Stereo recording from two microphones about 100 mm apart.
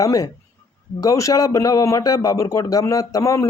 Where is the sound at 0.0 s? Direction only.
35° left (ahead or behind).